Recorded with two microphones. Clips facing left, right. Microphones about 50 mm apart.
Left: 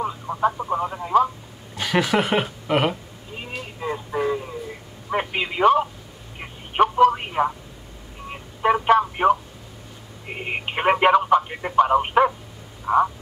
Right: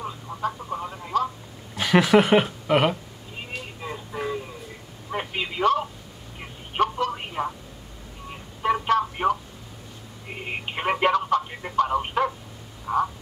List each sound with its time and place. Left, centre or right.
0.0 s radio: left
1.8 s speech: centre
3.8 s a sound: centre
5.3 s telephone: left
8.3 s a sound: left
10.2 s telephone: left
12.8 s frog: left